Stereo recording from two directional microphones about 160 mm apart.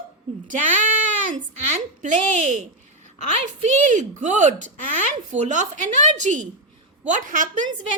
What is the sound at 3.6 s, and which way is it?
A woman's voice, 50° right (ahead or behind).